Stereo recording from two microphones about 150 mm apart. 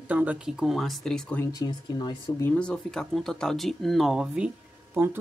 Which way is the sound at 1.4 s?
25° left (ahead or behind).